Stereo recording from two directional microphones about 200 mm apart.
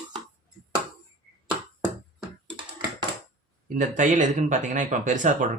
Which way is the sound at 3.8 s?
40° right (ahead or behind).